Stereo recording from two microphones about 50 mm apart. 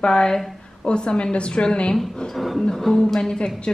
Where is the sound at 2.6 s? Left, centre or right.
Centre.